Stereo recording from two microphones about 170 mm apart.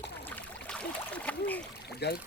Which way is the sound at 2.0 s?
75° left (ahead or behind).